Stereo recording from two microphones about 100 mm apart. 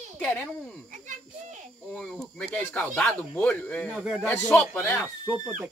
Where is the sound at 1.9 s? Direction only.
5° left (ahead or behind).